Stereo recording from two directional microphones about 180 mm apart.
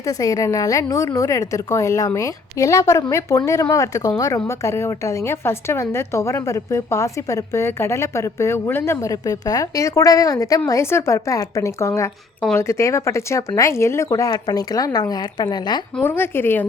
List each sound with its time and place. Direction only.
0.0 s a woman's voice: 20° left (ahead or behind)
16.0 s a woman's voice: 10° left (ahead or behind)